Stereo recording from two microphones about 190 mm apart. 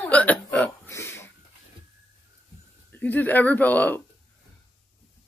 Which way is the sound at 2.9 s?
10° left (ahead or behind).